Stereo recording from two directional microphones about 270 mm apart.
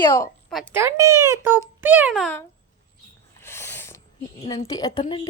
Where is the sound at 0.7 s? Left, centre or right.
Centre.